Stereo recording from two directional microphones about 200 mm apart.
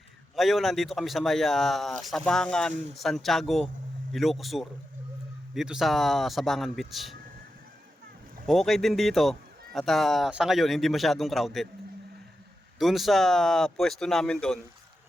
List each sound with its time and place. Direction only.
0.3 s speech: centre (ahead or behind)
8.4 s speech: centre (ahead or behind)
12.8 s speech: centre (ahead or behind)